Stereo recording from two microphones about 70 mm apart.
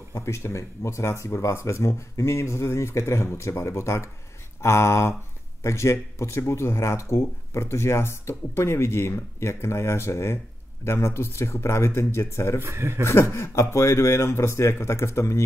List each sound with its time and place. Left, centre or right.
0.1 s speech: left
12.6 s speech: right
13.0 s speech: left